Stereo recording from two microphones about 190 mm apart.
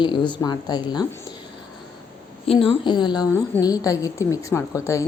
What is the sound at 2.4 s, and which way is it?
A woman's voice, 30° left (ahead or behind).